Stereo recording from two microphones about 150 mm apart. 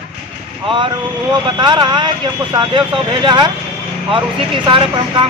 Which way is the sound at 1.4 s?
30° right (ahead or behind).